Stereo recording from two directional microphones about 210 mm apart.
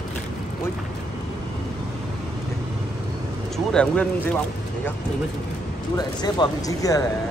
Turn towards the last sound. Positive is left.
turn(degrees=15)  # may be behind; listen again after turning